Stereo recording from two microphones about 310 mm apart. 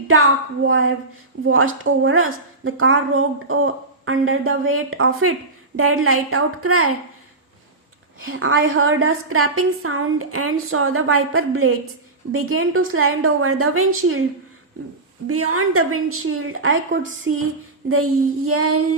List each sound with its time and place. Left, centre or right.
0.1 s a woman's voice: right
8.2 s a woman's voice: right
15.3 s a woman's voice: right